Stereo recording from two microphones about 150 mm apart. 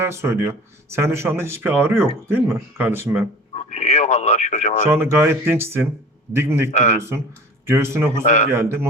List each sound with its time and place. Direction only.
0.0 s speech: 20° right (ahead or behind)
3.5 s sheep: 45° left (ahead or behind)
4.9 s speech: 15° right (ahead or behind)
6.7 s a man's voice: 50° left (ahead or behind)
7.7 s speech: 15° right (ahead or behind)
8.2 s a man's voice: 50° left (ahead or behind)
8.4 s speech: 15° right (ahead or behind)